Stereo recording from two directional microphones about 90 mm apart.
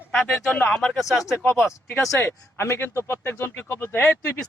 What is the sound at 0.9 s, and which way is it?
Speech, 5° right (ahead or behind).